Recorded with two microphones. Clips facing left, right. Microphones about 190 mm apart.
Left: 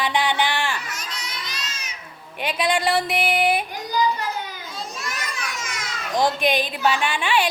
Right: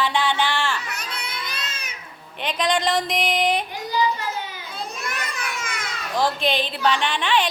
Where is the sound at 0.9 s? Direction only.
60° right (ahead or behind).